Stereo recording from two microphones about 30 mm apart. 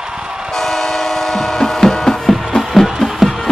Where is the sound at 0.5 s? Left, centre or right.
Centre.